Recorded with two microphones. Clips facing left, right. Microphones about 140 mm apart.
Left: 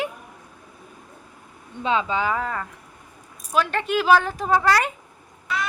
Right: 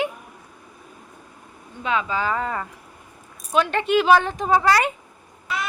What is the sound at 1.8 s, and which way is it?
Speech, 30° left (ahead or behind).